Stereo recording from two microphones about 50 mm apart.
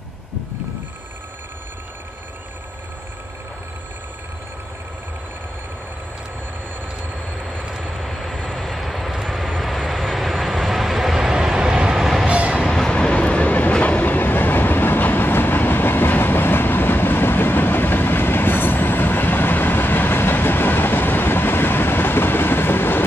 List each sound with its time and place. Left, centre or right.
7.3 s vehicle: centre
12.3 s a sound: right
12.6 s train: centre; by 23.0 s left